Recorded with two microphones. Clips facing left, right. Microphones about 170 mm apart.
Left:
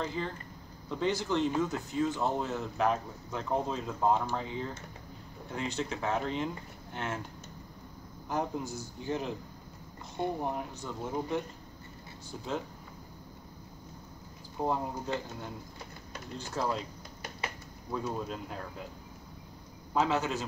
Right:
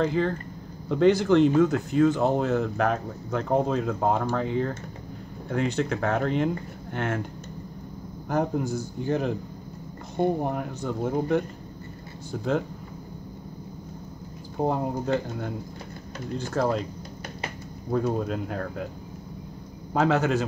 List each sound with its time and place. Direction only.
0.0 s speech: 70° right (ahead or behind)
8.3 s speech: 55° right (ahead or behind)
14.7 s speech: 60° right (ahead or behind)
17.9 s speech: 60° right (ahead or behind)
19.9 s speech: 60° right (ahead or behind)